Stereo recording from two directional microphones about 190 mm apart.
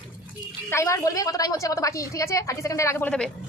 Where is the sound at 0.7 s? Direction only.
15° left (ahead or behind).